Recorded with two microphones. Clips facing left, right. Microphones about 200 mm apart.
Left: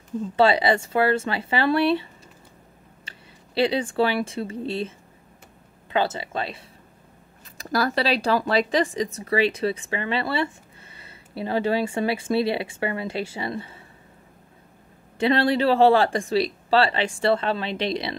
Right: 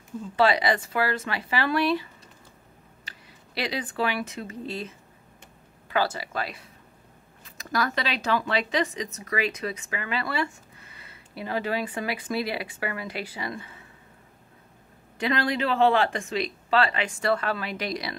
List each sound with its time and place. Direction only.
0.4 s speech: 25° left (ahead or behind)
3.1 s speech: 30° left (ahead or behind)
15.1 s speech: 30° left (ahead or behind)